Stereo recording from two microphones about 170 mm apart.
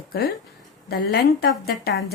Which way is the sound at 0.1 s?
65° left (ahead or behind).